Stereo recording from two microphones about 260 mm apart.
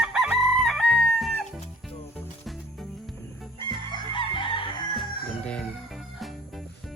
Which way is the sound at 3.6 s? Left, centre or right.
Centre.